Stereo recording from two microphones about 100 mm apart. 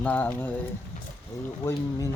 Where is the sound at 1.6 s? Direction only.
25° left (ahead or behind).